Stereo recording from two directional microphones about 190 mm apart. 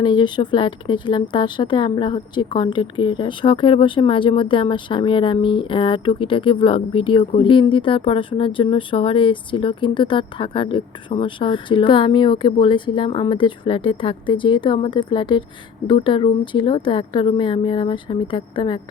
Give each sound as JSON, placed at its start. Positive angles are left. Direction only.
{"t": 0.0, "sound": "speech", "side_deg": 25}